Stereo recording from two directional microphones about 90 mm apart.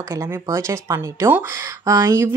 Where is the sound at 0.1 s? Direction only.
30° right (ahead or behind).